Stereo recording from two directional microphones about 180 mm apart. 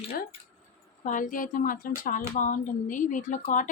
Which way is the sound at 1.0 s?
45° left (ahead or behind).